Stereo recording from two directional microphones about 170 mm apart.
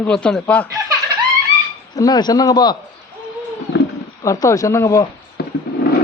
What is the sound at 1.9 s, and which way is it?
Speech, 20° left (ahead or behind).